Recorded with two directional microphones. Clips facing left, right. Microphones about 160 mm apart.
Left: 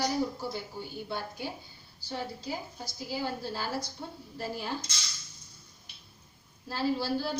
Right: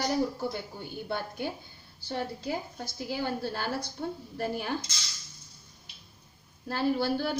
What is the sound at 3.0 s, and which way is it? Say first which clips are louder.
A woman's voice: right 2 dB; 60° right (ahead or behind).